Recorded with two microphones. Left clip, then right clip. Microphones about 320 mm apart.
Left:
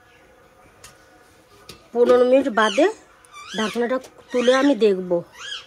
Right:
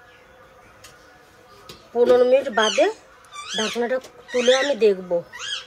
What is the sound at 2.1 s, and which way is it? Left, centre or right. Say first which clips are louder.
Speech: even; left.